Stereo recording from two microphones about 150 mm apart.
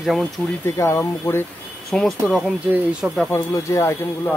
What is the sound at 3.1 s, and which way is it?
Speech, 15° left (ahead or behind).